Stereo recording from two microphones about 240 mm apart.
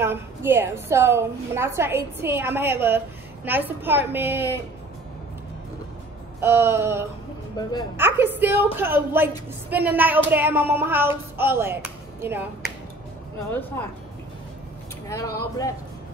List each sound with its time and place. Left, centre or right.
0.0 s a woman's voice: centre
6.4 s a woman's voice: centre
7.6 s speech: centre
8.0 s a woman's voice: centre
13.5 s speech: centre
15.0 s speech: centre